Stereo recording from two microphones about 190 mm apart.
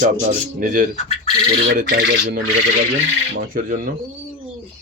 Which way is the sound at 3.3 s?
50° right (ahead or behind).